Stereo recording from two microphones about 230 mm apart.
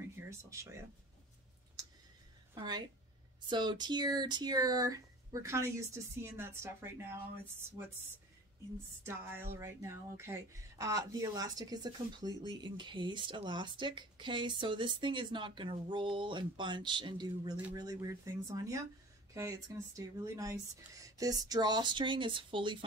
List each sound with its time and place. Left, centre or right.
0.1 s speech: centre
3.4 s speech: centre
8.7 s speech: centre